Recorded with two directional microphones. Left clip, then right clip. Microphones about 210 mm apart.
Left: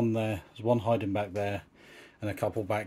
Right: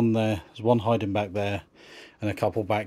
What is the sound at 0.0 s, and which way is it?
Speech, 40° right (ahead or behind).